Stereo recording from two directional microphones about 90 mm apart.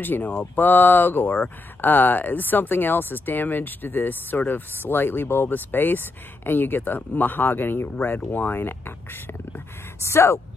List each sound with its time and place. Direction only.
0.0 s speech: 20° left (ahead or behind)
10.0 s speech: 30° left (ahead or behind)